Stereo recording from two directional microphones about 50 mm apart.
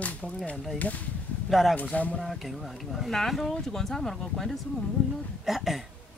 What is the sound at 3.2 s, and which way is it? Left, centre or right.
Speech, centre.